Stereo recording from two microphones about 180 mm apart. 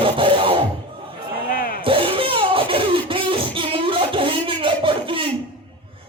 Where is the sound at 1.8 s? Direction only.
30° right (ahead or behind).